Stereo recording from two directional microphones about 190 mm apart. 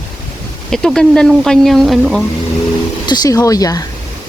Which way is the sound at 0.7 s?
Centre (ahead or behind).